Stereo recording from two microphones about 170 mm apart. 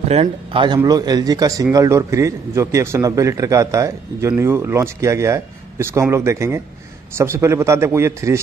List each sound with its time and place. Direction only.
0.1 s a man's voice: 35° right (ahead or behind); by 8.4 s 15° right (ahead or behind)